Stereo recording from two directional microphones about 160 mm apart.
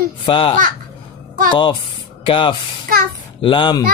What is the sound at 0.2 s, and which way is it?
Speech, 30° left (ahead or behind).